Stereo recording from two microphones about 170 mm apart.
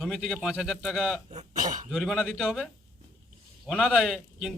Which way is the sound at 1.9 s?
Centre (ahead or behind).